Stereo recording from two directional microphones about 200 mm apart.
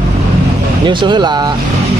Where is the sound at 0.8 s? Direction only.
25° right (ahead or behind).